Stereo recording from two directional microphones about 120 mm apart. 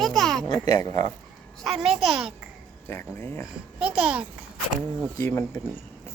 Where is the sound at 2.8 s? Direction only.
20° left (ahead or behind).